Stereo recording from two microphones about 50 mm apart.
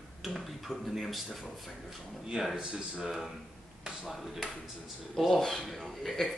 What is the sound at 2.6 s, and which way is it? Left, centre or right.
Speech, right.